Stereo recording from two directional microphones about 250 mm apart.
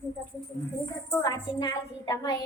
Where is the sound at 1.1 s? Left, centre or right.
Centre.